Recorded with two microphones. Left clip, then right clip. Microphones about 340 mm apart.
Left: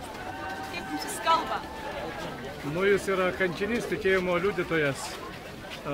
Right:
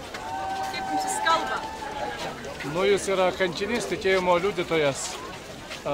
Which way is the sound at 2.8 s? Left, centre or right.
Centre.